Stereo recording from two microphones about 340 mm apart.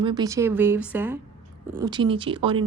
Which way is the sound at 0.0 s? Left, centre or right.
Centre.